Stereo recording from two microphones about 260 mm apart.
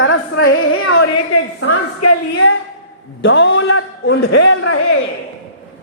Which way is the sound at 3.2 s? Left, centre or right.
Left.